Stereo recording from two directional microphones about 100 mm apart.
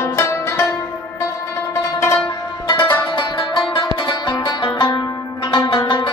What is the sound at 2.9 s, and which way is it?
Music, 55° left (ahead or behind).